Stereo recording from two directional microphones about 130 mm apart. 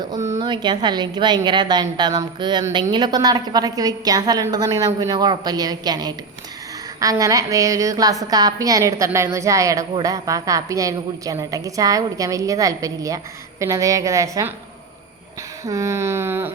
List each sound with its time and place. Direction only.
0.3 s a woman's voice: 35° right (ahead or behind)
15.6 s a woman's voice: 25° right (ahead or behind)